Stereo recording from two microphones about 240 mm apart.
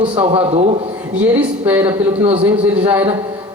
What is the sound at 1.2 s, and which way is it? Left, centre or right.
Speech, centre.